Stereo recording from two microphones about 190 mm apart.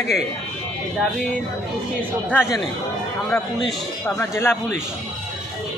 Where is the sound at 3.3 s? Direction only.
5° left (ahead or behind).